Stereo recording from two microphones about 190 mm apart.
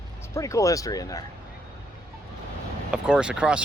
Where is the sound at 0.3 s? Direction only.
15° left (ahead or behind).